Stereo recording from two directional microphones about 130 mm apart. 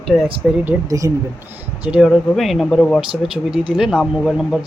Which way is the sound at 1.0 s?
25° right (ahead or behind).